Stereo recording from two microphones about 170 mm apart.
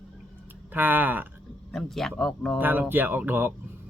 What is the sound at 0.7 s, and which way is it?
Speech, 10° right (ahead or behind).